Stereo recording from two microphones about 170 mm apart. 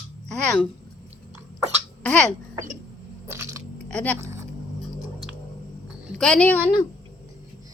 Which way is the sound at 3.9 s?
5° left (ahead or behind).